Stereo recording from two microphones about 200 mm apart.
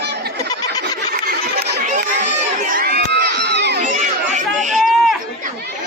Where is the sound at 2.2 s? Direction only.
40° right (ahead or behind).